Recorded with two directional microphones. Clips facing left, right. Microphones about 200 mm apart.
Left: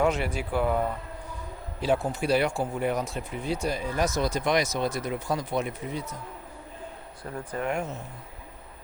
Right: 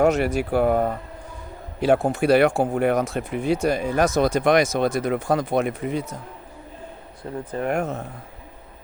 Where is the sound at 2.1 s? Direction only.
65° right (ahead or behind).